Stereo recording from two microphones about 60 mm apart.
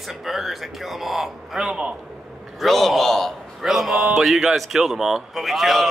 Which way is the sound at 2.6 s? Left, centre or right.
Centre.